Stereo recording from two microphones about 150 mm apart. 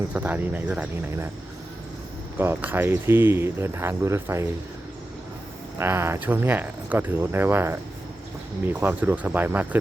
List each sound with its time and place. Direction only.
0.1 s speech: 10° right (ahead or behind)
2.4 s speech: 15° right (ahead or behind)
5.7 s speech: 15° right (ahead or behind)